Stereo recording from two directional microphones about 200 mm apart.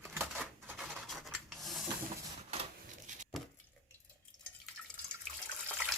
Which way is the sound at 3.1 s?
35° right (ahead or behind).